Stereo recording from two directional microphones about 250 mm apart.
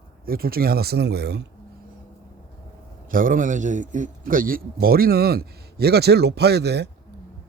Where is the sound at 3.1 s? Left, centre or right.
Right.